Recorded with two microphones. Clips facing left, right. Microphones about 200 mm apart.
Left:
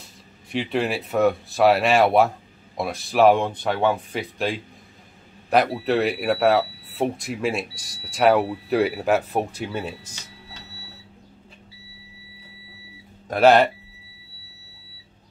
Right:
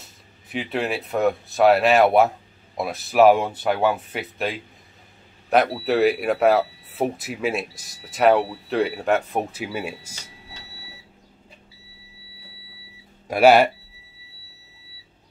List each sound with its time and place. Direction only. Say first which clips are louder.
0.0 s speech: left 3 dB; centre (ahead or behind)
13.3 s speech: right 1 dB; 10° right (ahead or behind)